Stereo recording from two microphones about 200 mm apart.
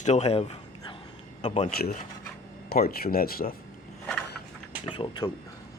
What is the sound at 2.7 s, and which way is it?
Speech, 50° left (ahead or behind).